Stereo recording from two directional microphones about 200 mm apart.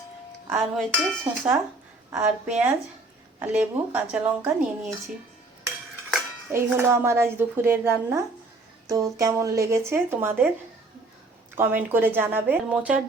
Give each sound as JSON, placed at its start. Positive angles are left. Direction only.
{"t": 0.5, "sound": "a woman's voice", "side_deg": -10}
{"t": 6.5, "sound": "a woman's voice", "side_deg": -10}
{"t": 11.5, "sound": "a woman's voice", "side_deg": -10}